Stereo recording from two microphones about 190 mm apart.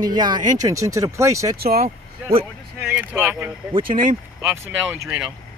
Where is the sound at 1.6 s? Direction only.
55° right (ahead or behind).